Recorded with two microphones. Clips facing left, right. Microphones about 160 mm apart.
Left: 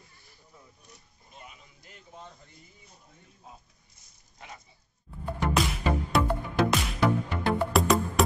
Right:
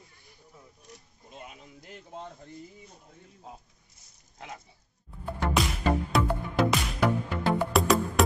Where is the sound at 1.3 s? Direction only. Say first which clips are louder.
Right 5 dB; 65° right (ahead or behind).